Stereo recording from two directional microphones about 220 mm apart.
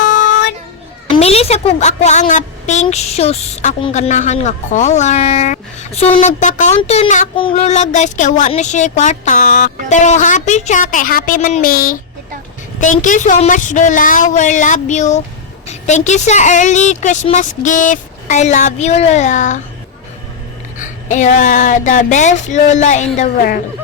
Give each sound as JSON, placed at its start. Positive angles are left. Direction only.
{"t": 1.1, "sound": "a woman's voice", "side_deg": 25}
{"t": 20.7, "sound": "a woman's voice", "side_deg": 35}